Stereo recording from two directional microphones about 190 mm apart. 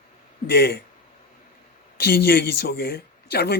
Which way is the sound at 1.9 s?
55° left (ahead or behind).